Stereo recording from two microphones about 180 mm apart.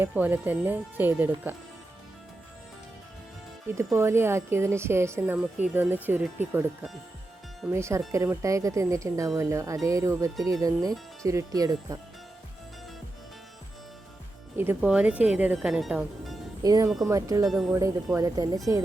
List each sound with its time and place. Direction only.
0.0 s a woman's voice: 10° right (ahead or behind)
3.9 s a woman's voice: 15° right (ahead or behind)
7.7 s a woman's voice: 15° right (ahead or behind)
14.6 s speech: 10° right (ahead or behind)
16.6 s speech: 20° right (ahead or behind)